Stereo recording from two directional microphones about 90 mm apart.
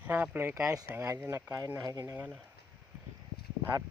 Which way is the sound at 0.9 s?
25° right (ahead or behind).